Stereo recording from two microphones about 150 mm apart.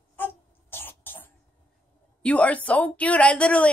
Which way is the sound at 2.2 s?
10° left (ahead or behind).